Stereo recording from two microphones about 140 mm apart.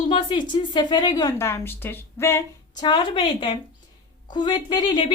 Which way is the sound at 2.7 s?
30° left (ahead or behind).